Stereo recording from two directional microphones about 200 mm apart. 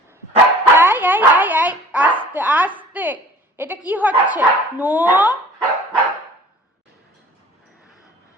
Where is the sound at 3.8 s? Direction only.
10° right (ahead or behind).